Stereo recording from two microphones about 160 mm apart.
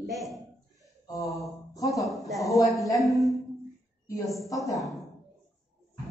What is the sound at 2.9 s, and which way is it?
Speech, centre (ahead or behind).